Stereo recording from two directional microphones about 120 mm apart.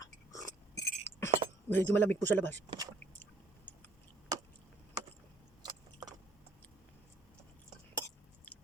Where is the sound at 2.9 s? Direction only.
15° left (ahead or behind).